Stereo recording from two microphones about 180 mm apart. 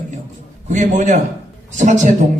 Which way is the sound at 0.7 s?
45° right (ahead or behind).